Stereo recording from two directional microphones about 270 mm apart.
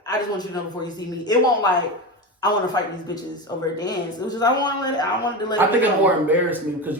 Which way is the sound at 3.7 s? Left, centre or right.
Centre.